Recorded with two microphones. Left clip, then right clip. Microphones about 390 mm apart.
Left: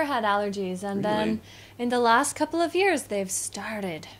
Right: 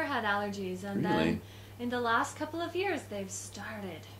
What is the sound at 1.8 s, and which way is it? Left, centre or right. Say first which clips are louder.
A woman's voice: left 9 dB; left.